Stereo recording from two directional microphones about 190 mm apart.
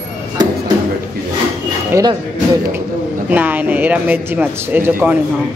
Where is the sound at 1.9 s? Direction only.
15° right (ahead or behind).